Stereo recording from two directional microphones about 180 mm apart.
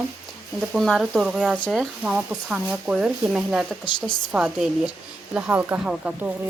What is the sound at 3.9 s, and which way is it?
Speech, 25° left (ahead or behind).